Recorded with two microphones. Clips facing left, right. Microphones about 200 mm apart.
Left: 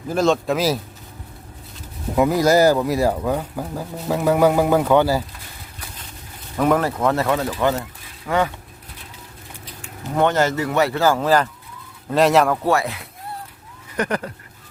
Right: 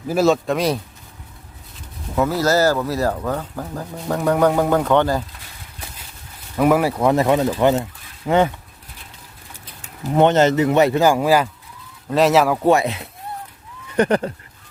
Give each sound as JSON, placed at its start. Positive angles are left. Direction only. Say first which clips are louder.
{"t": 0.1, "sound": "speech", "louder": "right 2 dB", "side_deg": -5}
{"t": 2.1, "sound": "speech", "louder": "left 2 dB", "side_deg": 15}
{"t": 6.6, "sound": "speech", "louder": "right 2 dB", "side_deg": -10}
{"t": 9.8, "sound": "speech", "louder": "right 4 dB", "side_deg": -20}
{"t": 12.6, "sound": "speech", "louder": "right 4 dB", "side_deg": -20}